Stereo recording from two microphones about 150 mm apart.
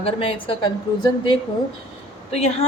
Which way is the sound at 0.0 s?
35° left (ahead or behind).